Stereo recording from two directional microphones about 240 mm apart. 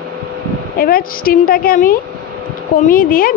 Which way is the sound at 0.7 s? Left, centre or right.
Left.